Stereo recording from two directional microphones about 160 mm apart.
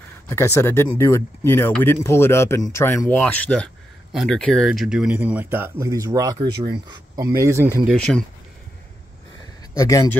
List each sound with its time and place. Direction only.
0.3 s speech: 15° left (ahead or behind); by 7.8 s 15° right (ahead or behind)
7.9 s speech: 5° left (ahead or behind)
9.8 s speech: 20° left (ahead or behind)